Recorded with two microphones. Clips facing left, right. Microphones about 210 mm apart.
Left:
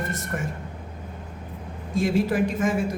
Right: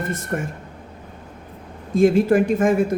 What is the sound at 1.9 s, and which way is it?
Speech, 55° right (ahead or behind).